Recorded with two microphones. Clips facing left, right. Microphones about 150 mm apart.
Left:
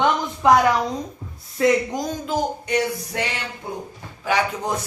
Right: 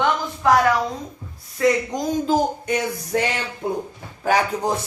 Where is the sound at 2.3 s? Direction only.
50° right (ahead or behind).